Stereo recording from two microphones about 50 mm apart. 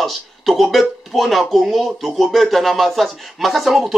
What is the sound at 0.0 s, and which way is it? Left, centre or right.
Speech, centre.